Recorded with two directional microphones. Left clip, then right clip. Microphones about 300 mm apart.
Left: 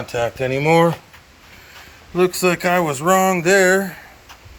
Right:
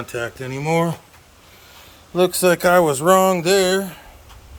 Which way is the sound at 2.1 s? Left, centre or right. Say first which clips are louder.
Right 1 dB; centre.